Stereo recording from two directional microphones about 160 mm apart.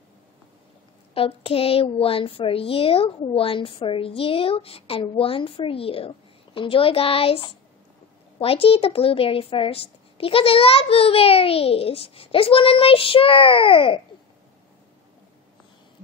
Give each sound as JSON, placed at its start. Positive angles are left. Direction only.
{"t": 1.1, "sound": "a woman's voice", "side_deg": 35}